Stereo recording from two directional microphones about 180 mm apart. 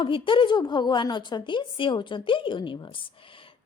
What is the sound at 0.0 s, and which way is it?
A woman's voice, 30° left (ahead or behind).